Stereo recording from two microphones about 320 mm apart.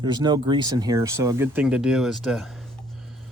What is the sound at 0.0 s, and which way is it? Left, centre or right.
Speech, centre.